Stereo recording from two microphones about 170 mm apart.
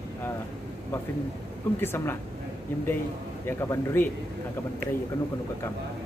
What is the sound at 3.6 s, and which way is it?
Speech, 15° left (ahead or behind).